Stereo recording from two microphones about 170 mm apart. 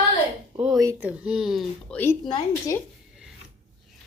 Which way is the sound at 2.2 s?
25° left (ahead or behind).